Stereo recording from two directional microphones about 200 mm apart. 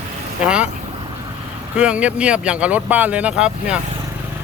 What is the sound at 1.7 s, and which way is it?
Speech, 5° right (ahead or behind).